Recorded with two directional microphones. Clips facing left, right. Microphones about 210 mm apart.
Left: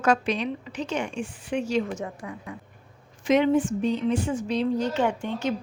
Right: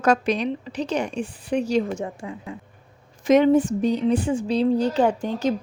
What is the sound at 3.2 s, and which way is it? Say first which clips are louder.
A woman's voice: right 4 dB; 40° right (ahead or behind).